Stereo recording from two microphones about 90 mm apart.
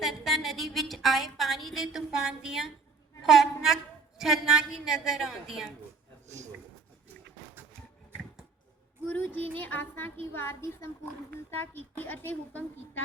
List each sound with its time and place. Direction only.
0.0 s a woman's voice: 5° right (ahead or behind)
9.0 s a woman's voice: 20° left (ahead or behind)